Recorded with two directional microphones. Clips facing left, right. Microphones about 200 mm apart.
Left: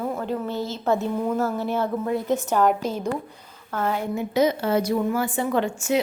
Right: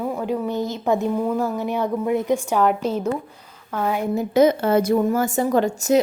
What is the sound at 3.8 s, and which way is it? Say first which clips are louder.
Speech: right 2 dB; 10° right (ahead or behind).